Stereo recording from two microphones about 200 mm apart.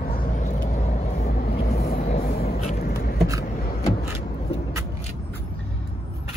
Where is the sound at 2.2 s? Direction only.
50° left (ahead or behind).